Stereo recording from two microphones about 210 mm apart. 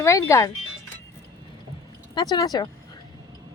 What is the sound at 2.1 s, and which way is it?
Speech, 20° left (ahead or behind).